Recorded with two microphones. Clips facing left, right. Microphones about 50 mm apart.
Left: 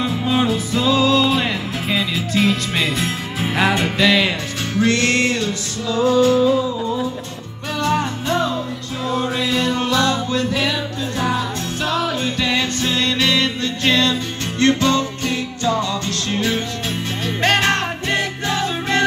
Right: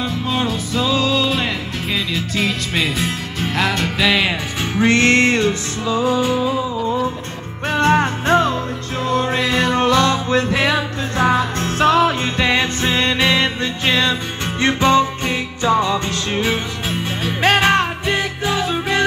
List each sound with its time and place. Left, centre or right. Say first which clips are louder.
0.0 s music: left 2 dB; centre
4.0 s music: even; centre
4.7 s music: right 3 dB; right
5.9 s music: left 4 dB; centre
7.7 s music: right 4 dB; right; by 19.0 s centre